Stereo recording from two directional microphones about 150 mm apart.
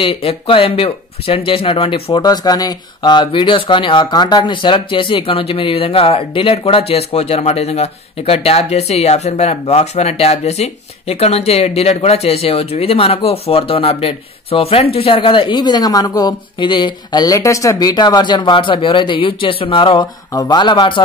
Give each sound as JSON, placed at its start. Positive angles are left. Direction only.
{"t": 0.0, "sound": "speech", "side_deg": 40}
{"t": 2.2, "sound": "speech", "side_deg": 25}